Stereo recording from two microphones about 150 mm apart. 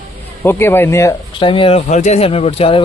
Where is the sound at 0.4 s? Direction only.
15° left (ahead or behind).